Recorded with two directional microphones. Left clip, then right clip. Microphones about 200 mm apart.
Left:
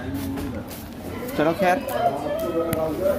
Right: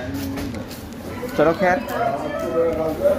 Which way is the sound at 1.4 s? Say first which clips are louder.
Right 5 dB; 15° right (ahead or behind).